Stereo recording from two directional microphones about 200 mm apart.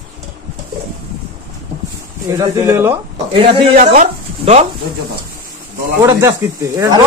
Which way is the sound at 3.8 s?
35° right (ahead or behind).